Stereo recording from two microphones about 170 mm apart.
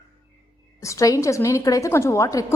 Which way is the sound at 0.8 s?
20° left (ahead or behind).